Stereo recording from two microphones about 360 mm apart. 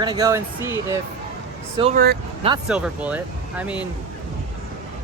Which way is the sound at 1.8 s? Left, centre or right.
Right.